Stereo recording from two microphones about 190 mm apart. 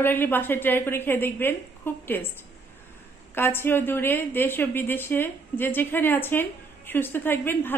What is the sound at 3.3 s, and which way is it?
A woman's voice, 10° left (ahead or behind).